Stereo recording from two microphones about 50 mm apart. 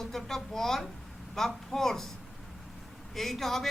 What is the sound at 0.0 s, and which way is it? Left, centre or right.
A woman's voice, centre.